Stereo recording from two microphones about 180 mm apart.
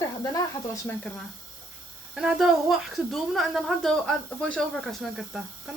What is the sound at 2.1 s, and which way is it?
A woman's voice, 5° right (ahead or behind).